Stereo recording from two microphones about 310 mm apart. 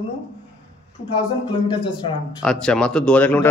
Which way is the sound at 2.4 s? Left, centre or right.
Centre.